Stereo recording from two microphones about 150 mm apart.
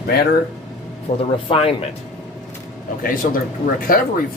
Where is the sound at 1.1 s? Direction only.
45° left (ahead or behind).